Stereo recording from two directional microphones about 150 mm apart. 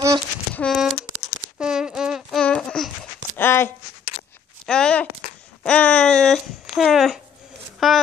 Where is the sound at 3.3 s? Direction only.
15° left (ahead or behind).